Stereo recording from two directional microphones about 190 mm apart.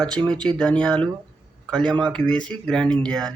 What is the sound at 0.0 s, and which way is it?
A man's voice, 5° left (ahead or behind).